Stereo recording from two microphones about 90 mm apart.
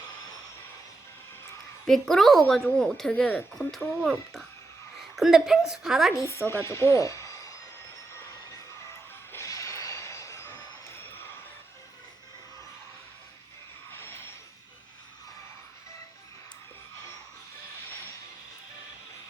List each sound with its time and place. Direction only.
1.9 s a woman's voice: 5° left (ahead or behind)
5.1 s a woman's voice: 5° right (ahead or behind)
6.1 s a woman's voice: 35° left (ahead or behind)
9.3 s vehicle: 35° left (ahead or behind)
13.9 s vehicle: 25° left (ahead or behind)